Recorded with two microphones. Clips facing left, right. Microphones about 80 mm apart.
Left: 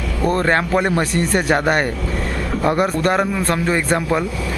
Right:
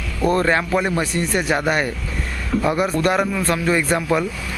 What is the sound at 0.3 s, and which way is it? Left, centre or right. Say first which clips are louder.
Speech: left 2 dB; left.